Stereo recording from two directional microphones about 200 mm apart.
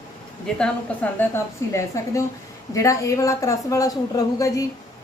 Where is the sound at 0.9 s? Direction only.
5° left (ahead or behind).